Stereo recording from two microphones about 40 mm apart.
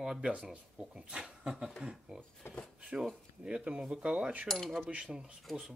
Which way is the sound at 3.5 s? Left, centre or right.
Right.